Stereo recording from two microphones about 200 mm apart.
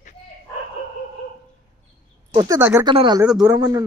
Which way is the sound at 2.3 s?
15° right (ahead or behind).